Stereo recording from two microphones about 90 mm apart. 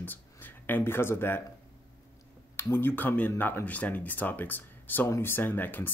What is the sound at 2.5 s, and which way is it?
Speech, 25° left (ahead or behind).